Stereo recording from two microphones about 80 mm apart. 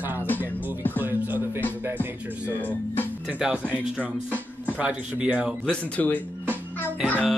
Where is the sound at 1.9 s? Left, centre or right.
Left.